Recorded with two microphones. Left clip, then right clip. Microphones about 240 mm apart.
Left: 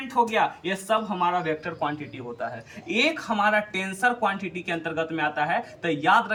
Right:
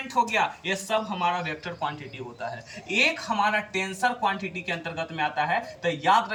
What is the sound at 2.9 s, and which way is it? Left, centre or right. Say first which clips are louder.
Speech: even; centre.